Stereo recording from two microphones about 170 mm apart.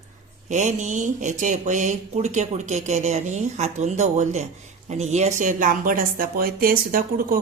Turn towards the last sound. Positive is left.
turn(degrees=-55)  # may be behind; listen again after turning